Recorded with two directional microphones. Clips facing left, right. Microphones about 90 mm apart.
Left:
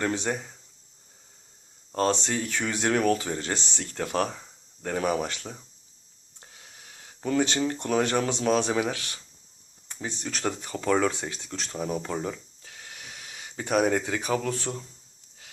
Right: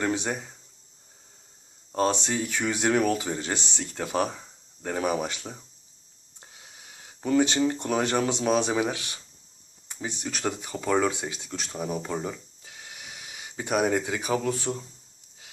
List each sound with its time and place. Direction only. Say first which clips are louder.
0.0 s speech: even; 15° right (ahead or behind)
1.9 s speech: even; 15° right (ahead or behind)
12.6 s gasp: right 1 dB; 15° right (ahead or behind)